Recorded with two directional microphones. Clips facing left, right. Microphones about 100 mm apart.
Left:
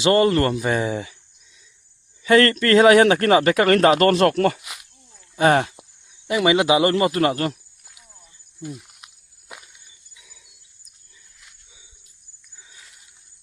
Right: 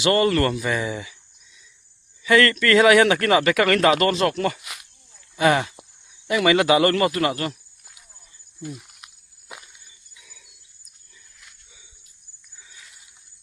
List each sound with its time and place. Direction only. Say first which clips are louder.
0.0 s speech: left 2 dB; 30° left (ahead or behind)
2.2 s speech: left 2 dB; 35° left (ahead or behind)
4.1 s speech: left 5 dB; 50° left (ahead or behind)
4.6 s a sound: even; 5° left (ahead or behind)
5.4 s speech: left 2 dB; 40° left (ahead or behind)
6.2 s speech: even; 20° left (ahead or behind)
7.1 s speech: left 3 dB; 35° left (ahead or behind)
10.2 s jingle bell: right 1 dB; 20° left (ahead or behind)